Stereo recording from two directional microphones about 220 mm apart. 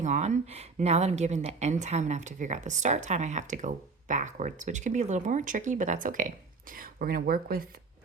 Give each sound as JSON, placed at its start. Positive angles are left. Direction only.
{"t": 0.0, "sound": "a woman's voice", "side_deg": -35}